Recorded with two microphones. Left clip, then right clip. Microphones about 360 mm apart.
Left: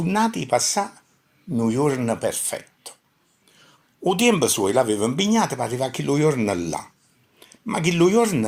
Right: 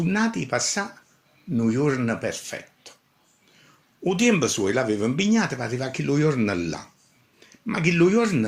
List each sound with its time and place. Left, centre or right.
0.0 s speech: centre
4.0 s speech: centre